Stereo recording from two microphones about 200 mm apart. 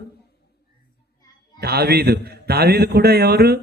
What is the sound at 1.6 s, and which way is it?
A man's voice, 50° right (ahead or behind).